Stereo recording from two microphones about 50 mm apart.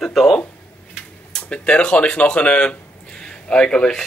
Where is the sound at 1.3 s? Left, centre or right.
Left.